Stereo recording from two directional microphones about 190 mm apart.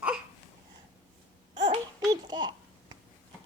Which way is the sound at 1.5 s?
20° right (ahead or behind).